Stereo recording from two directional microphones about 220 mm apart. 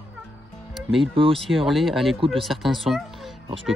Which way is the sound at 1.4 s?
Centre (ahead or behind).